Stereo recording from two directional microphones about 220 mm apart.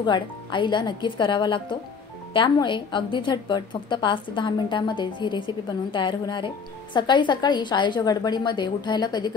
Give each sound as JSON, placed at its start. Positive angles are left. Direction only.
{"t": 0.0, "sound": "a woman's voice", "side_deg": 20}